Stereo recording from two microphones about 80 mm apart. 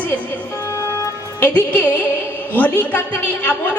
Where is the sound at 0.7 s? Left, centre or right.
Left.